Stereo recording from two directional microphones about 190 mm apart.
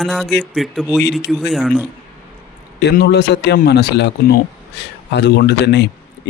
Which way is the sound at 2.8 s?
60° left (ahead or behind).